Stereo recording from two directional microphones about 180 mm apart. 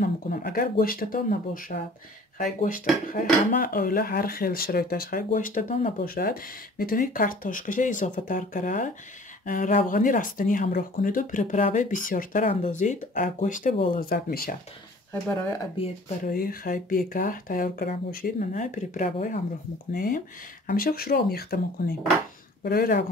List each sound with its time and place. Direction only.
0.0 s speech: 55° left (ahead or behind)
13.9 s speech: 55° left (ahead or behind)
16.3 s speech: 55° left (ahead or behind)